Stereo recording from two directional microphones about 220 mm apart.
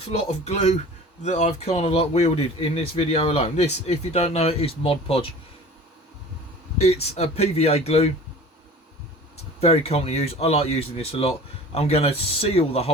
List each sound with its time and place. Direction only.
0.4 s speech: 30° left (ahead or behind)
6.7 s speech: 30° left (ahead or behind)
9.6 s speech: 25° left (ahead or behind)